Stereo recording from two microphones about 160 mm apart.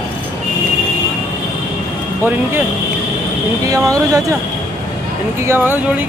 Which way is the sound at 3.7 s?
20° right (ahead or behind).